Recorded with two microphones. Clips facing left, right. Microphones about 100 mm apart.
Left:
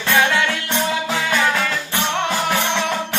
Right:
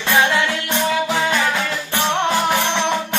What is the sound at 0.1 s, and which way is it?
Music, 20° right (ahead or behind).